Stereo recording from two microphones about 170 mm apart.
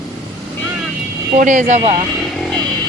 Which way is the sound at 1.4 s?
50° right (ahead or behind).